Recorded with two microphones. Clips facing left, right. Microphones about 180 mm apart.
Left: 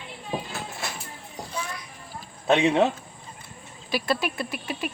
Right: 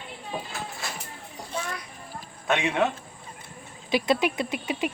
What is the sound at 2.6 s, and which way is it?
Speech, 25° left (ahead or behind).